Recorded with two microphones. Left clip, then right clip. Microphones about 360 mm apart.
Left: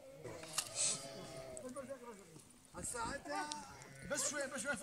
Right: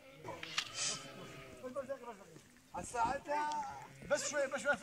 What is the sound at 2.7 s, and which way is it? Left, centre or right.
Speech, centre.